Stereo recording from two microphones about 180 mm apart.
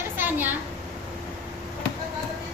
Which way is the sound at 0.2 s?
10° right (ahead or behind).